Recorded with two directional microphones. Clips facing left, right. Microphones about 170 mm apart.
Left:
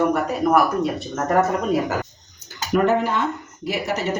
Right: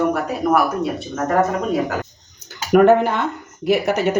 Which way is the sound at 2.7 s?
60° right (ahead or behind).